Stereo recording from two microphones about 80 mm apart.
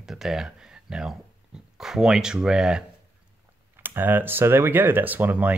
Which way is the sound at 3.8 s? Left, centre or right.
Right.